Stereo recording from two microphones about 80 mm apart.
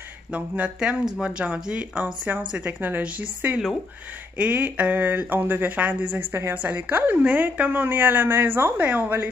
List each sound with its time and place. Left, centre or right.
0.3 s speech: centre